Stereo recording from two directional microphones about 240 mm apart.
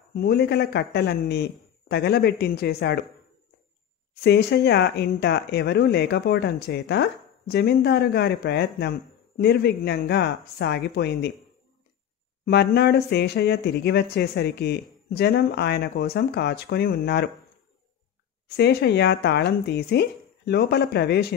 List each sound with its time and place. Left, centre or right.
0.1 s speech: left
4.1 s speech: left
12.4 s speech: left
18.6 s speech: left